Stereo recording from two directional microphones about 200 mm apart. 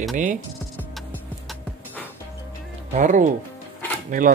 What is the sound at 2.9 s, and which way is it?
Speech, 40° right (ahead or behind).